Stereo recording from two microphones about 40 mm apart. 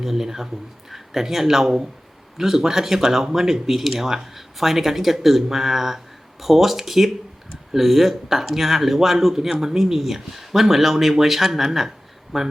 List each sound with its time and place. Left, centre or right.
0.0 s speech: centre